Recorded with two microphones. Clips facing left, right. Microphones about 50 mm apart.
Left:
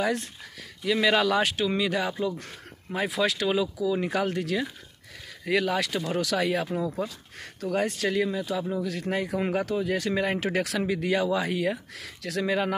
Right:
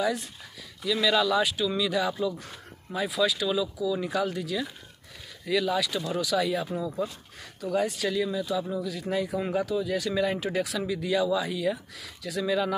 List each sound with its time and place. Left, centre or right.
0.0 s speech: left
1.7 s speech: left
6.2 s speech: left
7.7 s speech: left
8.8 s speech: left
9.8 s speech: left
10.4 s speech: left